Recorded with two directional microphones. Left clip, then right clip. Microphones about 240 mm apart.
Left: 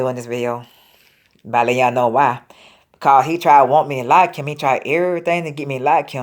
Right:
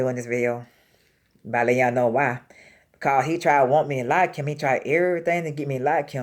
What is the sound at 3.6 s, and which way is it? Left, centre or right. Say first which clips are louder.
Speech: left 5 dB; left.